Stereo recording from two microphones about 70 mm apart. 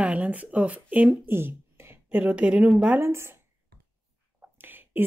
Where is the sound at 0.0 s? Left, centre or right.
Centre.